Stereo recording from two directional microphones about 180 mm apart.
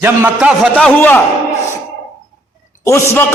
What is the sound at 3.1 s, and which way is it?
Speech, 10° left (ahead or behind).